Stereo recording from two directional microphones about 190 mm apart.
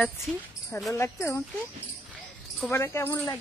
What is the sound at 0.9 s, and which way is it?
Speech, 15° left (ahead or behind).